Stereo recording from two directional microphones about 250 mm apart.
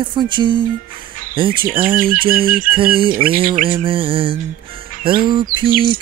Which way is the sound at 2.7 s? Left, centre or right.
Right.